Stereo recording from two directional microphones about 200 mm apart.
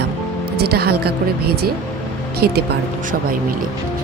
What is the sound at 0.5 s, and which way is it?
Speech, 55° right (ahead or behind).